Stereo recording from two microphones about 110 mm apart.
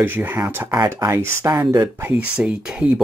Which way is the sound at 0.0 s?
20° right (ahead or behind).